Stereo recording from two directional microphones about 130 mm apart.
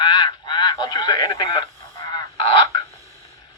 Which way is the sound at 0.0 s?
35° left (ahead or behind).